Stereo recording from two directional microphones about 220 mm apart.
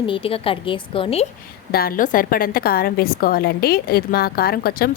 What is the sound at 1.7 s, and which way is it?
A woman's voice, 40° left (ahead or behind).